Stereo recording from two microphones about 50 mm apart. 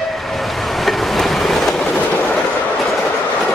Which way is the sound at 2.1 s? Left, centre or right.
Left.